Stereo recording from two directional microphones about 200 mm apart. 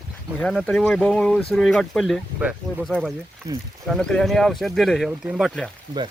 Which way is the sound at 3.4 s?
15° right (ahead or behind).